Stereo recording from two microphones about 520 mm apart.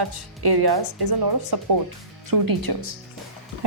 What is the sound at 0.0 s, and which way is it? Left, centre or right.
A woman's voice, right.